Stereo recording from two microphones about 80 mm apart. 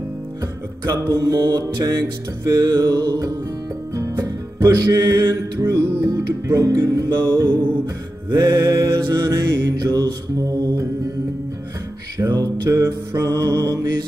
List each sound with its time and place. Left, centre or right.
0.8 s music: right
12.2 s music: right